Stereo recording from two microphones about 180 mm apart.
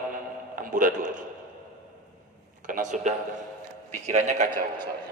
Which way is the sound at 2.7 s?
45° right (ahead or behind).